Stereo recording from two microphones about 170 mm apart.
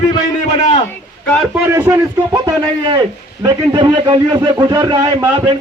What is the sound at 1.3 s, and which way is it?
Speech, centre (ahead or behind).